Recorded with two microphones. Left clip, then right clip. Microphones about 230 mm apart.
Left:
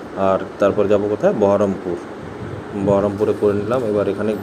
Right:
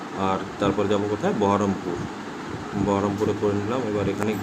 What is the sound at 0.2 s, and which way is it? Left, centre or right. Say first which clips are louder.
Speech: left 8 dB; centre.